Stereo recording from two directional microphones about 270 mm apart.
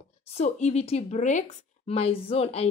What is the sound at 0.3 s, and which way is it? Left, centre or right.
A woman's voice, left.